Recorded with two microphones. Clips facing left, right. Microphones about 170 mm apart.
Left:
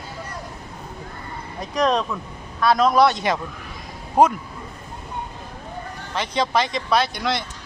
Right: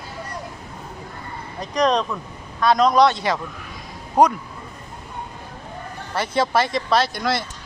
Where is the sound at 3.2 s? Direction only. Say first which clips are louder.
Even; 20° left (ahead or behind).